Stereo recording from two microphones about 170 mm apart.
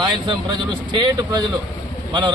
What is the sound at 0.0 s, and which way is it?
A man's voice, 25° right (ahead or behind).